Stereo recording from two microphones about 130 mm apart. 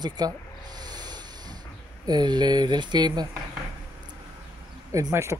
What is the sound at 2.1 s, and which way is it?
Speech, 35° right (ahead or behind).